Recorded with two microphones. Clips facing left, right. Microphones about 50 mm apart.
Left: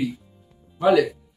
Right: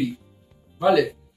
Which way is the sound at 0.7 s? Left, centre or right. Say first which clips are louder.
Left 1 dB; centre.